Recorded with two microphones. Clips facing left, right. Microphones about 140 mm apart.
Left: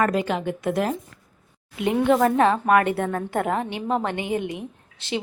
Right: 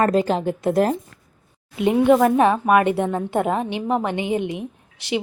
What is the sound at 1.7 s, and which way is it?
Speech, 20° right (ahead or behind).